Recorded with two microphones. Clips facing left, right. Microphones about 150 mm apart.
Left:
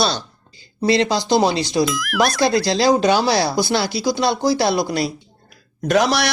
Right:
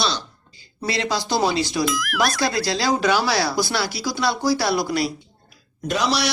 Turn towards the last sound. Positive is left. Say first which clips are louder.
# left 5 dB
turn(degrees=55)  # may be behind; listen again after turning